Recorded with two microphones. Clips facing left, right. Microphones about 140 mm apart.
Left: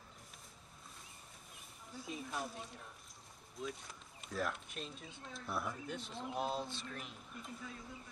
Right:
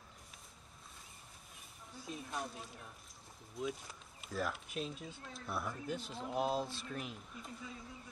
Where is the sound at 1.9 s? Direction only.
Centre (ahead or behind).